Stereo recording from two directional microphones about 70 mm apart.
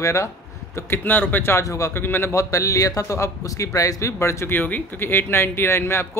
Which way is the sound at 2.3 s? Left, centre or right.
Left.